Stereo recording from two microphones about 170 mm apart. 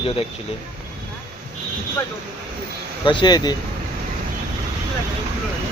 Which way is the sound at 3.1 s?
25° left (ahead or behind).